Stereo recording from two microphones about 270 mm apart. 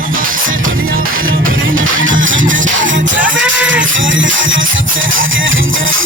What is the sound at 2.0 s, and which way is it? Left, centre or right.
Music, right.